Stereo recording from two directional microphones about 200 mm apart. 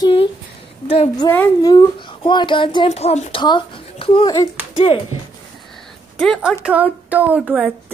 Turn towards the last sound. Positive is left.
turn(degrees=-5)  # may be behind; listen again after turning